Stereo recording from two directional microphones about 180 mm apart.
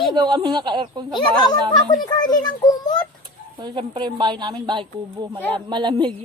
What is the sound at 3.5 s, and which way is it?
A woman's voice, 25° right (ahead or behind).